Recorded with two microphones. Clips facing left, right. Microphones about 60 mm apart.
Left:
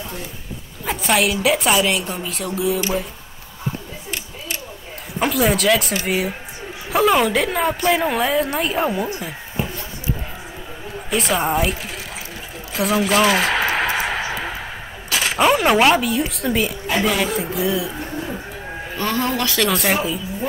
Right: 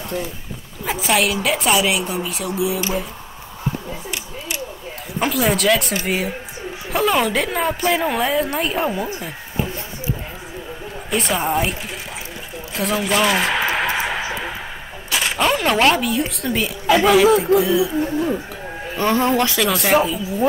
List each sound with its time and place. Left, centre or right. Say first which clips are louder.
0.8 s a woman's voice: even; centre
5.2 s a woman's voice: left 1 dB; centre
11.1 s a woman's voice: left 1 dB; centre
12.7 s a sound: left 2 dB; centre
15.0 s a woman's voice: left 2 dB; centre
18.9 s speech: right 4 dB; right
19.5 s a woman's voice: right 2 dB; centre